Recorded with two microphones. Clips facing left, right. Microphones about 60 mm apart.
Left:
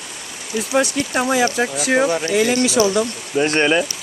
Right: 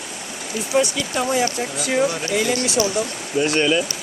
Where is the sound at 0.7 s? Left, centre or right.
Left.